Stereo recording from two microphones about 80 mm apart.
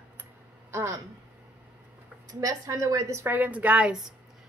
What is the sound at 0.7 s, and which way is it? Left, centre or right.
Speech, right.